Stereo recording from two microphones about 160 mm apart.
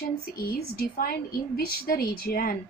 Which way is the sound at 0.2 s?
70° left (ahead or behind).